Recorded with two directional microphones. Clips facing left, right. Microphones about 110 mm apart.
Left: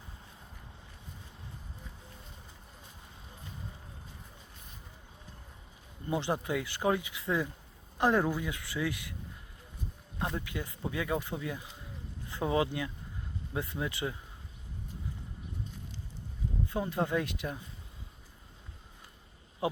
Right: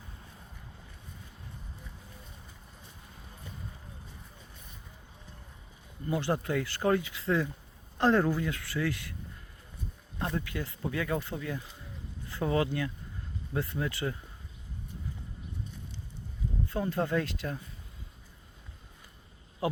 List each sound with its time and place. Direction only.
6.1 s speech: 20° left (ahead or behind)
10.2 s speech: 15° left (ahead or behind)
16.6 s speech: 15° left (ahead or behind)
19.6 s speech: 20° left (ahead or behind)